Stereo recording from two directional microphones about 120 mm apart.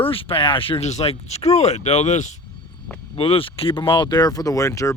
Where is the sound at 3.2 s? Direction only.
50° left (ahead or behind); by 5.0 s 25° left (ahead or behind).